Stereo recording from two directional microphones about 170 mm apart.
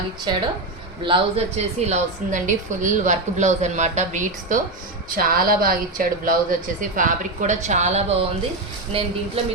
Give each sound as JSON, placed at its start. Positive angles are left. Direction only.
{"t": 1.0, "sound": "a woman's voice", "side_deg": -35}